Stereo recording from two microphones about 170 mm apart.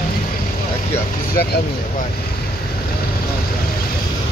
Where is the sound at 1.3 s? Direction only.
70° left (ahead or behind).